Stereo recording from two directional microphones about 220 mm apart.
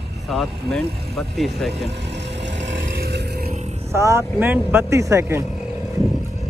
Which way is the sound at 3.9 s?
10° right (ahead or behind).